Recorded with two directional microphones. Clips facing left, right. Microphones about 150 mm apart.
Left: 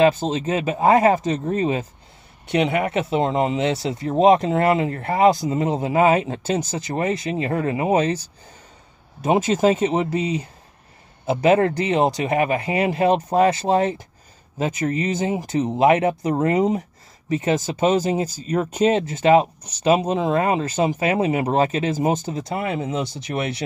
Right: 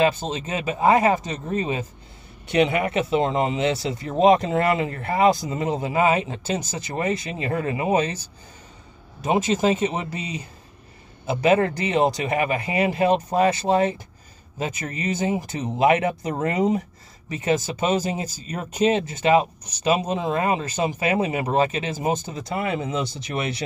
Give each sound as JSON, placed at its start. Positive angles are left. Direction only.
{"t": 0.3, "sound": "speech", "side_deg": 35}
{"t": 9.6, "sound": "speech", "side_deg": 30}